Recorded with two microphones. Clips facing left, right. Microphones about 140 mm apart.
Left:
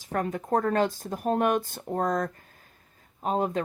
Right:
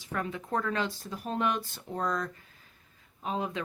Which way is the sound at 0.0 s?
45° left (ahead or behind).